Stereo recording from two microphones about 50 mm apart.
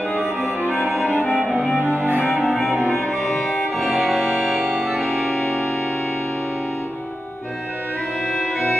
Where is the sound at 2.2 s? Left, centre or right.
Centre.